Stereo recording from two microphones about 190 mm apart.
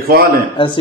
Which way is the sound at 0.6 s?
25° left (ahead or behind).